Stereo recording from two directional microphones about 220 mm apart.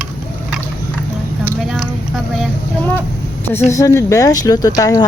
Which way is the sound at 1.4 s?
Centre (ahead or behind).